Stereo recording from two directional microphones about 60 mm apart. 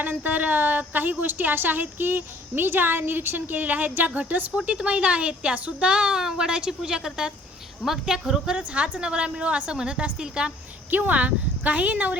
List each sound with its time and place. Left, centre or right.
0.0 s a woman's voice: right
4.5 s speech: centre
8.5 s speech: right
10.9 s speech: right